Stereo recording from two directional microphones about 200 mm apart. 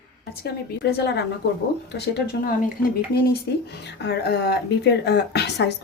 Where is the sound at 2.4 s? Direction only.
50° left (ahead or behind).